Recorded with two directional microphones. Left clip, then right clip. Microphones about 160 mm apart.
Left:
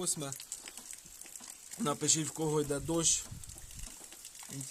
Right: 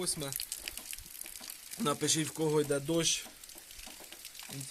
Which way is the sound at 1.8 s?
5° left (ahead or behind).